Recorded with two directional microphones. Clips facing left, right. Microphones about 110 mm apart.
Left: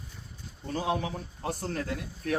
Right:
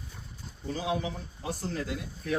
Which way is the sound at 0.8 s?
50° left (ahead or behind).